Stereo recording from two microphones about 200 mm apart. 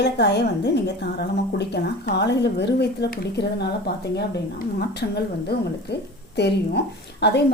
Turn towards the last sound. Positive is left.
turn(degrees=55)  # may be behind; listen again after turning